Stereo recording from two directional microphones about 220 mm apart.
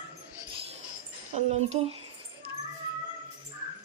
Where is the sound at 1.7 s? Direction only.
30° right (ahead or behind).